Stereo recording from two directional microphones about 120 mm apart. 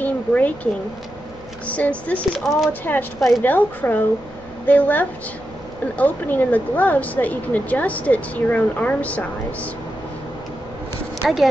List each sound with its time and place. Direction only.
0.0 s a sound: 15° left (ahead or behind)
1.7 s speech: 10° left (ahead or behind)
2.8 s speech: 15° left (ahead or behind)
3.2 s a woman's voice: centre (ahead or behind)
3.4 s speech: 15° left (ahead or behind)
11.2 s a woman's voice: centre (ahead or behind)